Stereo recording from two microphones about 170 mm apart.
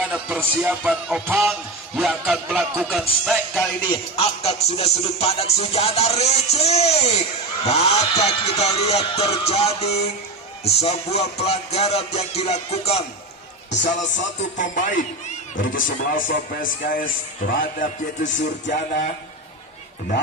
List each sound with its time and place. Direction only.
0.1 s speech: 5° right (ahead or behind)
2.0 s music: centre (ahead or behind)
3.8 s music: 35° left (ahead or behind)
14.6 s speech: 50° left (ahead or behind)